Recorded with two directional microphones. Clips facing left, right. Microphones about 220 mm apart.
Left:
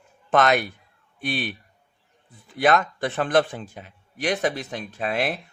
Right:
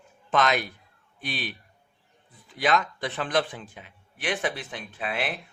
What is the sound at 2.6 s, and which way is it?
A man's voice, 50° left (ahead or behind).